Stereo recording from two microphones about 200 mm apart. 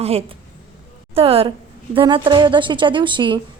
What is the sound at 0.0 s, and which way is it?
A woman's voice, 30° right (ahead or behind).